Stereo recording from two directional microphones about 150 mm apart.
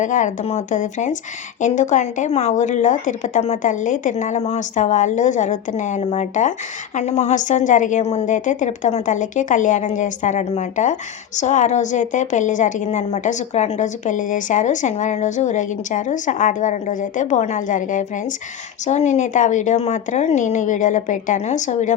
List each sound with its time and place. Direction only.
0.0 s a woman's voice: 55° left (ahead or behind)